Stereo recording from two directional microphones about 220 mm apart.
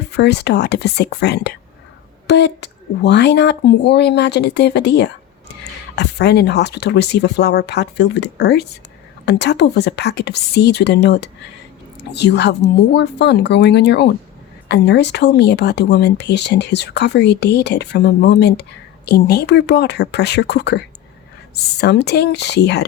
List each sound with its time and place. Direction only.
0.1 s speech: 50° left (ahead or behind)